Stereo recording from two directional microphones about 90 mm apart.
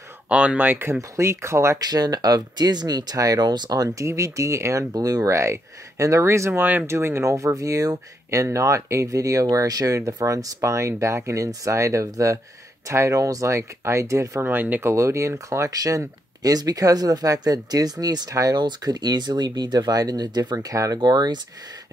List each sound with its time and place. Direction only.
0.3 s speech: 15° right (ahead or behind); by 1.8 s 30° right (ahead or behind)
1.8 s speech: 45° right (ahead or behind)
4.1 s speech: 35° right (ahead or behind)
14.4 s speech: 20° right (ahead or behind); by 21.0 s 40° right (ahead or behind)
21.0 s speech: 50° right (ahead or behind)